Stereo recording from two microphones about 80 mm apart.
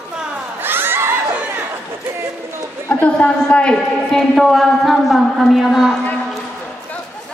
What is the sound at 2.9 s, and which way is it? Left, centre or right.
A woman's voice, centre.